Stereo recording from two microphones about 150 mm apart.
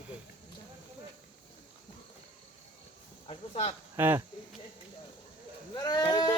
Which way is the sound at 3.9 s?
15° right (ahead or behind).